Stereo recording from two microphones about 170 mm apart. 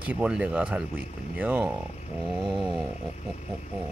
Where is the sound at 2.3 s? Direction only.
Centre (ahead or behind).